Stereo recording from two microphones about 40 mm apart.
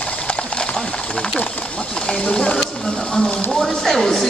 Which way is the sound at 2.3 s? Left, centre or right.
Left.